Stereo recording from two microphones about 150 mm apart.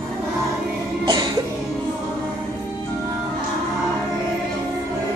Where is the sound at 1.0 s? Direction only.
30° right (ahead or behind).